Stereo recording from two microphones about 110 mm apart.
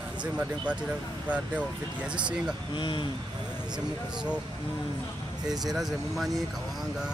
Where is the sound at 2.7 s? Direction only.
50° left (ahead or behind).